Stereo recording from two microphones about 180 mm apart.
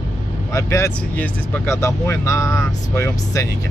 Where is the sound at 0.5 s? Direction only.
15° left (ahead or behind).